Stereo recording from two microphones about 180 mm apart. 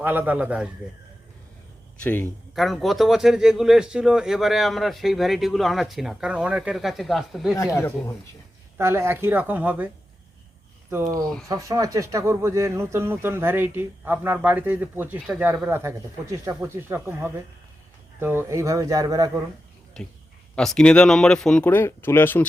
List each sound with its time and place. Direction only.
0.0 s speech: 10° right (ahead or behind)
2.0 s speech: 10° left (ahead or behind)
7.8 s speech: 15° left (ahead or behind)
8.8 s speech: 15° right (ahead or behind)
20.0 s speech: centre (ahead or behind)